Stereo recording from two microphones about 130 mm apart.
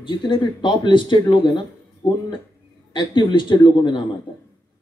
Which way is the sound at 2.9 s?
35° left (ahead or behind).